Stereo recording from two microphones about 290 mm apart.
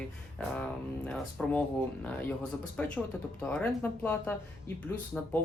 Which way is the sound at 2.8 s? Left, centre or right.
Centre.